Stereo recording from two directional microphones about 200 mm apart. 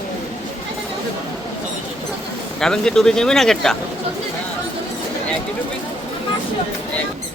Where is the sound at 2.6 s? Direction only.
5° left (ahead or behind).